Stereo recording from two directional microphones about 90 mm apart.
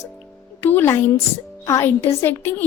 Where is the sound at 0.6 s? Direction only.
25° left (ahead or behind).